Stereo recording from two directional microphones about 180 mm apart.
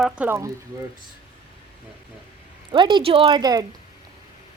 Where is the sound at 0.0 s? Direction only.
10° right (ahead or behind).